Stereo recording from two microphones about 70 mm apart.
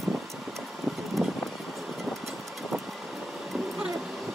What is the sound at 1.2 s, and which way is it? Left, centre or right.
Vehicle, centre.